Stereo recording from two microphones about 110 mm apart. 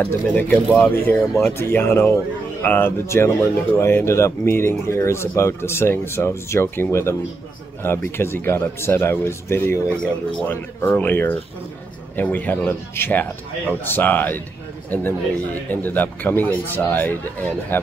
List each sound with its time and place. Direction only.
0.0 s speech: 15° left (ahead or behind)